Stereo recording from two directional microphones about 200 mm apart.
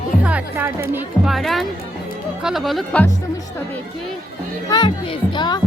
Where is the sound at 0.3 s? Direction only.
10° right (ahead or behind).